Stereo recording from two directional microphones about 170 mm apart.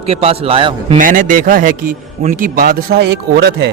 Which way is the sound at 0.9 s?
50° right (ahead or behind).